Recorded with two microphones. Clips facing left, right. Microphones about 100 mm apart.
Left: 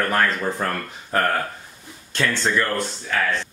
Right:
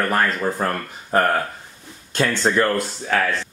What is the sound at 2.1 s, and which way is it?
Speech, 35° right (ahead or behind).